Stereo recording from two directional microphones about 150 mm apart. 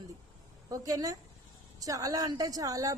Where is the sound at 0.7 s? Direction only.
25° right (ahead or behind).